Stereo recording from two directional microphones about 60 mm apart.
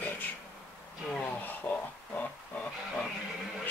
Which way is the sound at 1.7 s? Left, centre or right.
Left.